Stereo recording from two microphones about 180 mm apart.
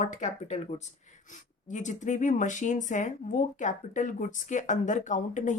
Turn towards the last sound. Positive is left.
turn(degrees=45)  # may be behind; listen again after turning